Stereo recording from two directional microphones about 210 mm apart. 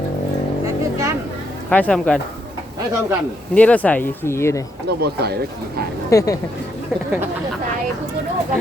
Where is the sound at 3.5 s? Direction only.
5° left (ahead or behind).